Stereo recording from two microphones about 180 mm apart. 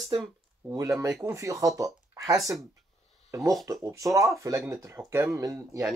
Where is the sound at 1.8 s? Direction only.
20° right (ahead or behind).